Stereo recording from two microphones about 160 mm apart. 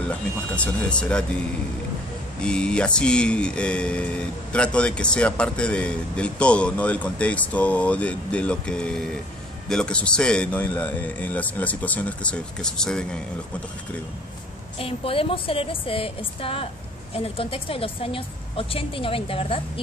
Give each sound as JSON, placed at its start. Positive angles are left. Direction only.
{"t": 0.1, "sound": "speech", "side_deg": 5}
{"t": 2.4, "sound": "speech", "side_deg": 5}
{"t": 14.8, "sound": "a woman's voice", "side_deg": 35}